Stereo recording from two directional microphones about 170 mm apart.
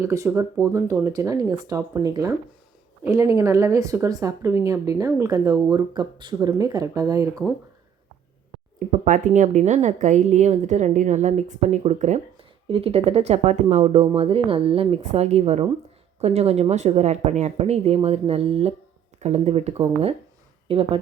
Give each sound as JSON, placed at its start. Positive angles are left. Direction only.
{"t": 0.0, "sound": "speech", "side_deg": -15}
{"t": 9.0, "sound": "a woman's voice", "side_deg": -50}